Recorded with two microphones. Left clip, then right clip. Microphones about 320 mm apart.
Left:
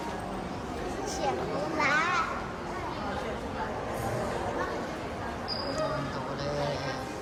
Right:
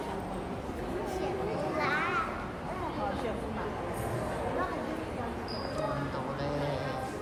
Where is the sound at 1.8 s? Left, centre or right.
Left.